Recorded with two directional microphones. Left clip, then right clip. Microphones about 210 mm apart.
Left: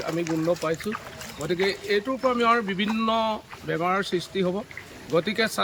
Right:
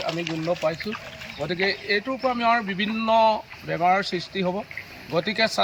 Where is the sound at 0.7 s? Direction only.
25° left (ahead or behind).